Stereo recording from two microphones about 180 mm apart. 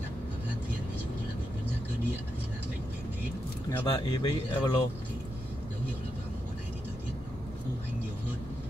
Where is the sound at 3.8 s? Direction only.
25° left (ahead or behind).